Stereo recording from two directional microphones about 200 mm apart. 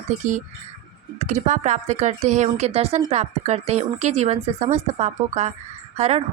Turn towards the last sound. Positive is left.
turn(degrees=-35)  # may be behind; listen again after turning